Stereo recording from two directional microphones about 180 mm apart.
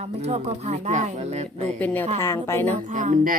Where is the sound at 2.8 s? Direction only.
45° right (ahead or behind).